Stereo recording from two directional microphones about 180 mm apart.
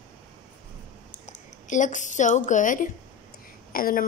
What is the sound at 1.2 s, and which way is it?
A woman's voice, 45° left (ahead or behind).